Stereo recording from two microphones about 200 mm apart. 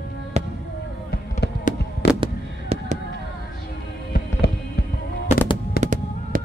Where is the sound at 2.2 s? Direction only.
30° right (ahead or behind).